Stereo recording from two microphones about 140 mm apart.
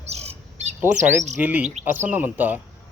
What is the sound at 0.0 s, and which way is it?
Squawk, 50° right (ahead or behind).